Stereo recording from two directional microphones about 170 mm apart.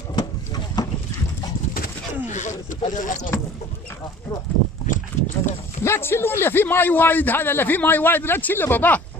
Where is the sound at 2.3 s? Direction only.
45° left (ahead or behind).